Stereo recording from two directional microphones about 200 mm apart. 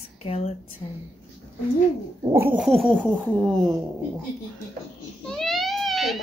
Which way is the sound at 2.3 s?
10° right (ahead or behind).